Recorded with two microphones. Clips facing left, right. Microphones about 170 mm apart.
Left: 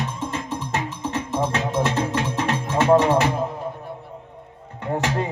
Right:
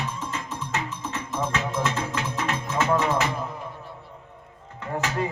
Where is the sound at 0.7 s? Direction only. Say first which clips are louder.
Left 4 dB; 30° left (ahead or behind).